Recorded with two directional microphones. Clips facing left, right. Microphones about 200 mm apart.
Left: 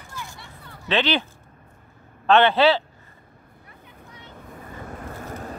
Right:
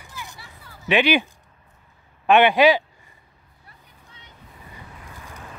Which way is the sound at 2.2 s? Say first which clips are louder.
Right 1 dB; 15° right (ahead or behind).